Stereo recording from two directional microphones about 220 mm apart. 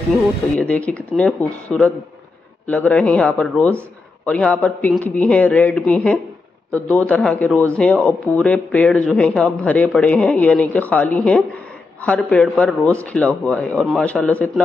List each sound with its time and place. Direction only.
0.2 s speech: 5° left (ahead or behind)